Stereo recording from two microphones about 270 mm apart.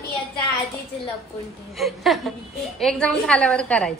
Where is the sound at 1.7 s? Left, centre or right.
Centre.